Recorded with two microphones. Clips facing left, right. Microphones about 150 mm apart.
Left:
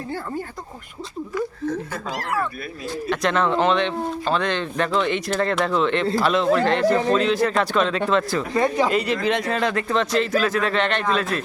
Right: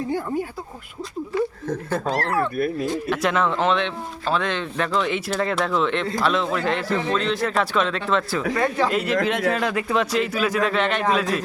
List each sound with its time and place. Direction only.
2.0 s speech: 30° right (ahead or behind)
3.1 s speech: 5° right (ahead or behind)
8.5 s speech: 15° left (ahead or behind)
8.9 s speech: centre (ahead or behind)